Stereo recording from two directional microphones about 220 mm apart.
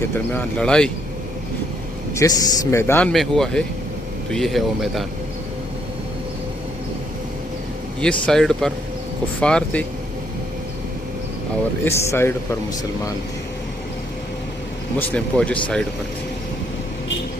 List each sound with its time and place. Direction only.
0.3 s speech: 5° left (ahead or behind)
2.1 s speech: 10° left (ahead or behind)
8.0 s speech: centre (ahead or behind)
11.9 s speech: 10° left (ahead or behind)
14.9 s speech: 5° left (ahead or behind)